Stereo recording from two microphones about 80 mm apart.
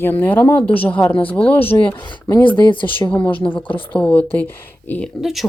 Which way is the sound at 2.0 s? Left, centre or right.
Left.